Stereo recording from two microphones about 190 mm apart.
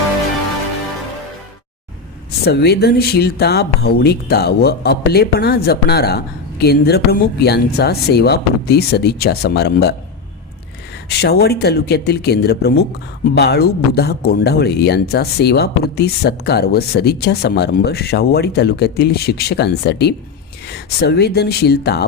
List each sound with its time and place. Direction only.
2.4 s speech: 60° left (ahead or behind)
11.1 s speech: 60° left (ahead or behind)